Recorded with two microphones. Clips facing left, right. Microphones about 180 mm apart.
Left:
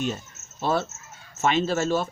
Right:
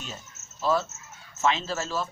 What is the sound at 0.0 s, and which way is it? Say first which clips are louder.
Speech: left 12 dB; 60° left (ahead or behind).